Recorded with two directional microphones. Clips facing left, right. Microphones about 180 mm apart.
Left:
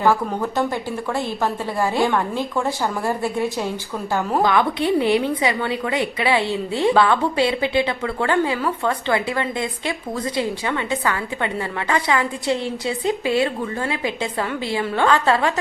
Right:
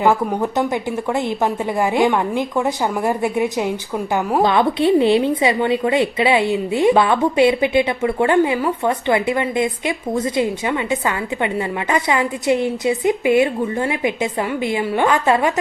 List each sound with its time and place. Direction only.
0.0 s a woman's voice: 20° right (ahead or behind)